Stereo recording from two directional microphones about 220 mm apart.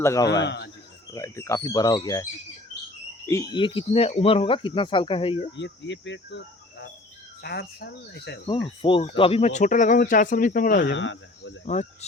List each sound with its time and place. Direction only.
0.0 s speech: 15° left (ahead or behind)
0.4 s speech: 50° left (ahead or behind)
1.1 s speech: 15° left (ahead or behind)
3.2 s speech: 15° left (ahead or behind)
5.5 s speech: 55° left (ahead or behind)
8.6 s speech: 25° left (ahead or behind)
10.9 s speech: 60° left (ahead or behind)
11.6 s speech: 30° left (ahead or behind)